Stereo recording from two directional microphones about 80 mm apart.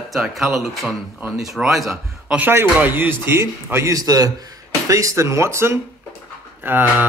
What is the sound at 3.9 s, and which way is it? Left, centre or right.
A man's voice, right.